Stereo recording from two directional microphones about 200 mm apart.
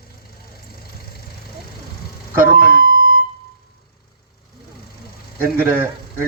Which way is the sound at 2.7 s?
45° right (ahead or behind).